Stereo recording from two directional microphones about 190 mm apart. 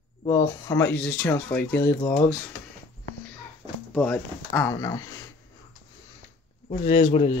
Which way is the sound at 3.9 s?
5° left (ahead or behind).